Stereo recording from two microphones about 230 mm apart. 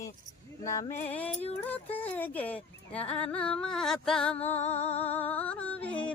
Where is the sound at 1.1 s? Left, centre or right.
Centre.